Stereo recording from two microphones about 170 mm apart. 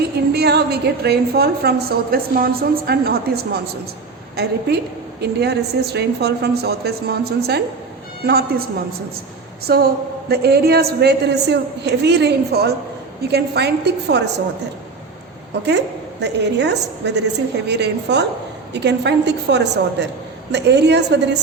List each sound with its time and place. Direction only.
0.3 s a woman's voice: 70° right (ahead or behind)
9.7 s a woman's voice: 70° right (ahead or behind); by 14.4 s 85° right
16.2 s a woman's voice: 90° right